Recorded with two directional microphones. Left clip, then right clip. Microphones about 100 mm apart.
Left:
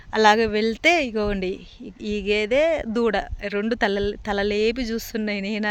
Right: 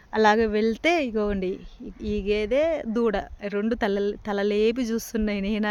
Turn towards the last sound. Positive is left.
turn(degrees=-20)  # may be behind; listen again after turning